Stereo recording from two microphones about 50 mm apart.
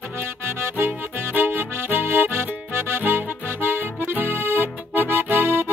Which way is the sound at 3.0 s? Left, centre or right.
Right.